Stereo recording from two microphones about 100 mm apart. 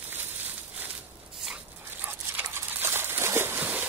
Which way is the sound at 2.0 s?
20° right (ahead or behind).